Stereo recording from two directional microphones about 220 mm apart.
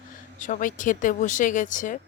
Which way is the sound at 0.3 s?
35° left (ahead or behind).